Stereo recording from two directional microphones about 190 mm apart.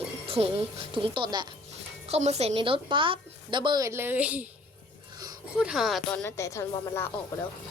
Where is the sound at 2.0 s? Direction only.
35° right (ahead or behind); by 4.4 s 10° right (ahead or behind).